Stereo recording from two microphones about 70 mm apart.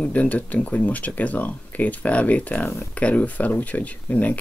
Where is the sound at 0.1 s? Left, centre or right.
Left.